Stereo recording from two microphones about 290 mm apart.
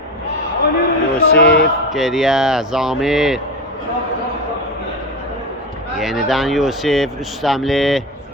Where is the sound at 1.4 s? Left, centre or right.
Left.